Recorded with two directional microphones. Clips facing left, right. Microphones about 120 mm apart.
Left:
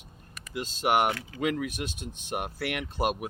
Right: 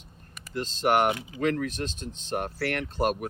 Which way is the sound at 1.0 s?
20° right (ahead or behind).